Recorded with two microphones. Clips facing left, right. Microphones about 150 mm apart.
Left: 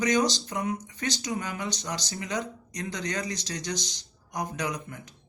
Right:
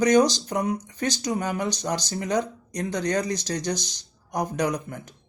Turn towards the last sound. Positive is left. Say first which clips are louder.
# right 6 dB
turn(degrees=-45)  # may be behind; listen again after turning